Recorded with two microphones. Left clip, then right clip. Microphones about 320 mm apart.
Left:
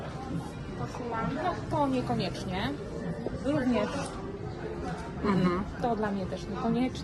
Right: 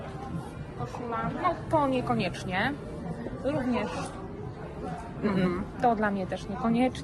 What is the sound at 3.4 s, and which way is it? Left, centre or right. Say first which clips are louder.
Speech: even; centre.